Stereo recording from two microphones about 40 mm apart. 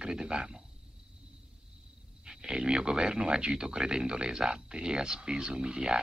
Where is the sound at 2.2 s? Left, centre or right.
Centre.